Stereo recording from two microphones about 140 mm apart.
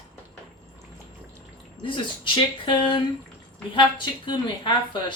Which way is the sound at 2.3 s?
35° left (ahead or behind).